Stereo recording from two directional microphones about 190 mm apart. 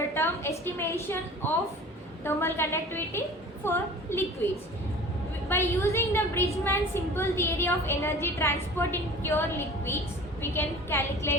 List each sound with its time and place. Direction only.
0.1 s a woman's voice: 15° left (ahead or behind)
5.5 s a woman's voice: 15° left (ahead or behind)